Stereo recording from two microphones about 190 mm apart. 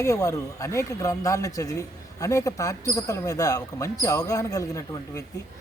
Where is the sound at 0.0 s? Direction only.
15° left (ahead or behind).